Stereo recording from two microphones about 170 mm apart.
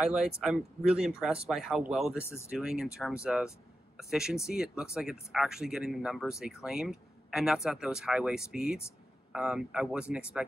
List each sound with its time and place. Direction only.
0.0 s speech: 5° right (ahead or behind)
2.1 s speech: 15° left (ahead or behind)
2.5 s speech: 5° right (ahead or behind)